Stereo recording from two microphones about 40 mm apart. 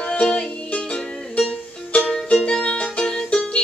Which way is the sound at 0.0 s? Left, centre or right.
Left.